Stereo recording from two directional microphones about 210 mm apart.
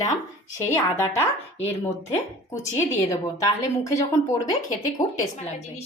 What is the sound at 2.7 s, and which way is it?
A woman's voice, 15° left (ahead or behind).